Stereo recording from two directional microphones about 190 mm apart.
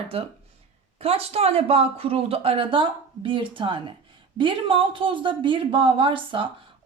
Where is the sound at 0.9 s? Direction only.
30° right (ahead or behind).